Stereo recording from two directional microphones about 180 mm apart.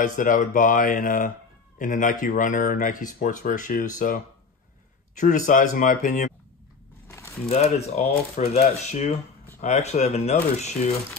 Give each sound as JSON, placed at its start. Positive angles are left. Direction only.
{"t": 0.0, "sound": "a man's voice", "side_deg": 45}
{"t": 7.1, "sound": "a sound", "side_deg": 15}
{"t": 7.4, "sound": "speech", "side_deg": 35}